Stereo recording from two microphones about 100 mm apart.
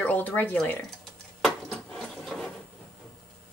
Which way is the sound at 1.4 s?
Centre (ahead or behind).